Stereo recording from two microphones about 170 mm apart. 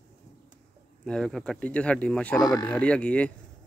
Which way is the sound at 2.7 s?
5° left (ahead or behind).